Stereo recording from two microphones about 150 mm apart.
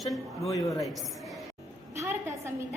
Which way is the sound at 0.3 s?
20° left (ahead or behind).